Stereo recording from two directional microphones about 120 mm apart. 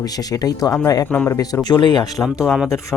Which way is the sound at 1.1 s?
15° left (ahead or behind).